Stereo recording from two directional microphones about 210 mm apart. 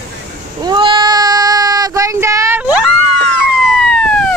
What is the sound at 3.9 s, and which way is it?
Police car, 5° left (ahead or behind).